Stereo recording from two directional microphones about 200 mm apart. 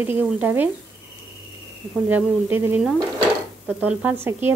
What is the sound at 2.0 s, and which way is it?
Speech, 10° right (ahead or behind).